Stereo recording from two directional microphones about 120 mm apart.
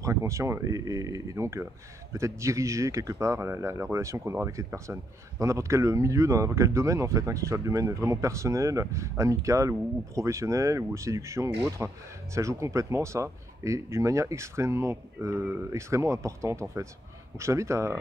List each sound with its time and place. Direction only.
0.0 s speech: 25° right (ahead or behind)